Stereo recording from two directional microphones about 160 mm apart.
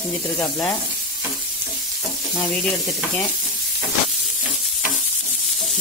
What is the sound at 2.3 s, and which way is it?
Sizzle, centre (ahead or behind).